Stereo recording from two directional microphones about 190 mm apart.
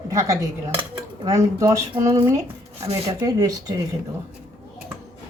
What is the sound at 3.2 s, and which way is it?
Speech, 20° right (ahead or behind).